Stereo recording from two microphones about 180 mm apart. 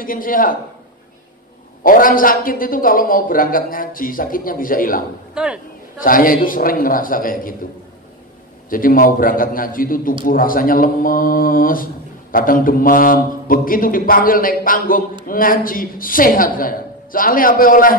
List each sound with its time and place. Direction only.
0.0 s speech: 50° left (ahead or behind)
1.8 s speech: 50° left (ahead or behind)
5.3 s speech: 5° right (ahead or behind)
6.0 s speech: 50° left (ahead or behind)
8.6 s speech: 50° left (ahead or behind)